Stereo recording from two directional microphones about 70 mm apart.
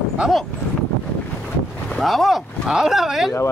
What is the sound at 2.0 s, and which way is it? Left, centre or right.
Speech, centre.